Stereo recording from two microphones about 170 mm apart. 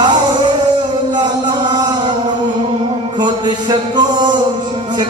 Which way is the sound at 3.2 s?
25° right (ahead or behind).